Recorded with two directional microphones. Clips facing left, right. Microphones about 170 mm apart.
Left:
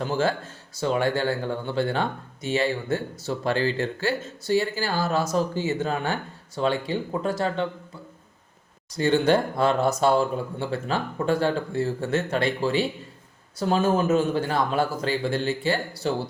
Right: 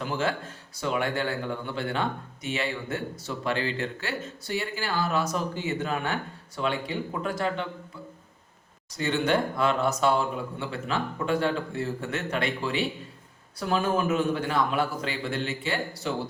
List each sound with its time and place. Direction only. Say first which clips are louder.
0.0 s speech: left 4 dB; 35° left (ahead or behind)
9.0 s speech: left 5 dB; 35° left (ahead or behind)